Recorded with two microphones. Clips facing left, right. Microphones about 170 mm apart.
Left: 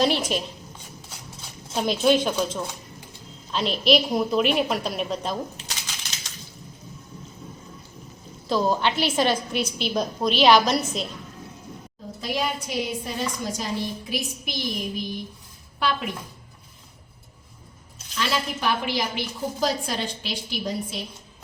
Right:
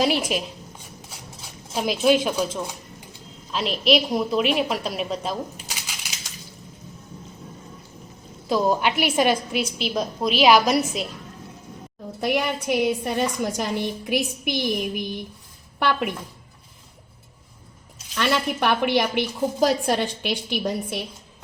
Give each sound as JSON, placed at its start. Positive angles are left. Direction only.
{"t": 0.0, "sound": "a woman's voice", "side_deg": -5}
{"t": 1.7, "sound": "a woman's voice", "side_deg": 0}
{"t": 8.5, "sound": "a woman's voice", "side_deg": -15}
{"t": 12.2, "sound": "a woman's voice", "side_deg": -60}
{"t": 18.2, "sound": "a woman's voice", "side_deg": -60}